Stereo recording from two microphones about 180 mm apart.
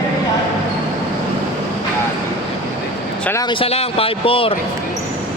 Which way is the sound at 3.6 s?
30° left (ahead or behind).